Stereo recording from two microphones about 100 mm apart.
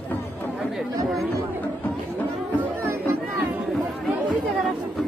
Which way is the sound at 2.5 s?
20° right (ahead or behind).